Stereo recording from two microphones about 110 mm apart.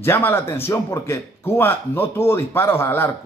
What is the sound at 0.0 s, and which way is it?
A man's voice, 20° left (ahead or behind).